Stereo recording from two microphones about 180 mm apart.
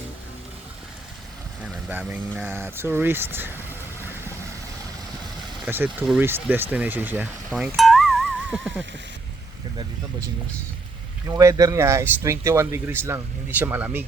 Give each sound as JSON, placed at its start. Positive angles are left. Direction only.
{"t": 1.6, "sound": "speech", "side_deg": -5}
{"t": 5.6, "sound": "speech", "side_deg": -10}
{"t": 7.8, "sound": "music", "side_deg": 0}
{"t": 11.3, "sound": "speech", "side_deg": -20}